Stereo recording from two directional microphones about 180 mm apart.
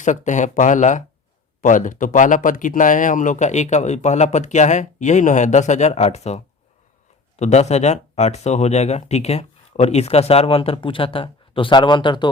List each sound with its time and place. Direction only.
0.0 s speech: 45° left (ahead or behind); by 12.3 s 25° left (ahead or behind)